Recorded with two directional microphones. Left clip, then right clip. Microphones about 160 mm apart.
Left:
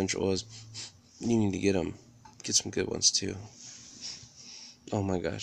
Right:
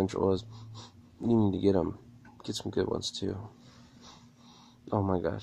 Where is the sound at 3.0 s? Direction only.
5° left (ahead or behind).